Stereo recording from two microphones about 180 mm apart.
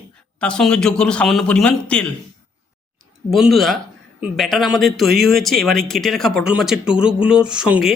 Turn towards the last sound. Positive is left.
turn(degrees=-5)  # may be behind; listen again after turning